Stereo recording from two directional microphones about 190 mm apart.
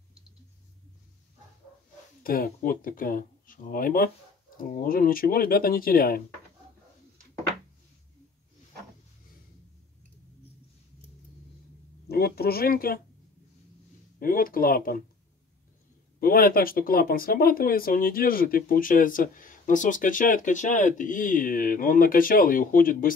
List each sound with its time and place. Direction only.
2.2 s speech: 50° left (ahead or behind)
12.1 s speech: 55° left (ahead or behind)
14.2 s speech: 50° left (ahead or behind)
16.2 s speech: 50° left (ahead or behind)